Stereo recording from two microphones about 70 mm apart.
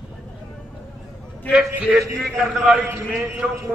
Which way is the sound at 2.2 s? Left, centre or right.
Centre.